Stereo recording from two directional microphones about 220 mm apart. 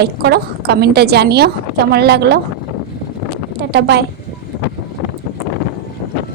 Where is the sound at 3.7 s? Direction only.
50° right (ahead or behind).